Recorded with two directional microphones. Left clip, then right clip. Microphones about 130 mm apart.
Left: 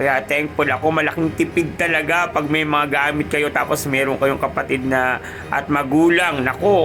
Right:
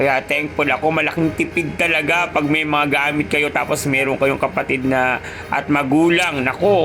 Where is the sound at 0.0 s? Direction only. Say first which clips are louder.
Right 1 dB; 20° right (ahead or behind).